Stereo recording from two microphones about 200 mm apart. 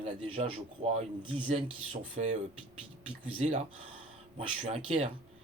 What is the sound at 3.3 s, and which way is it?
Speech, 40° right (ahead or behind).